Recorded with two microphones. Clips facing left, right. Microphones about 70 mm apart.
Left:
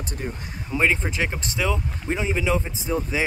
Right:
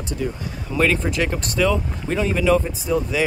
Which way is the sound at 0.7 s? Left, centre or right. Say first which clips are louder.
Right 3 dB; centre.